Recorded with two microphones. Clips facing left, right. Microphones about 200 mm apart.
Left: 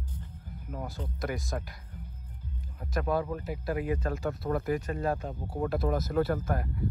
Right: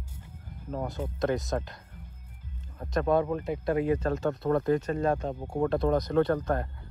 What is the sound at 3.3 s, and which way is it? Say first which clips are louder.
Speech: right 5 dB; 25° right (ahead or behind).